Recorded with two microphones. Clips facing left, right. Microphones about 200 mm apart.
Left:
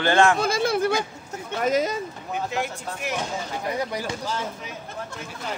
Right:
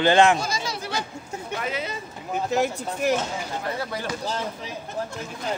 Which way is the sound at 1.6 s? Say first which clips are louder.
Left 11 dB; 40° left (ahead or behind).